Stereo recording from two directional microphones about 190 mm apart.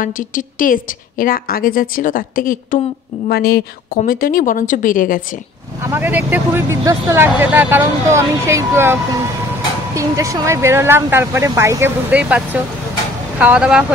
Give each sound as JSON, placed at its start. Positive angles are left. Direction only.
{"t": 0.0, "sound": "a woman's voice", "side_deg": 45}
{"t": 5.9, "sound": "speech", "side_deg": -10}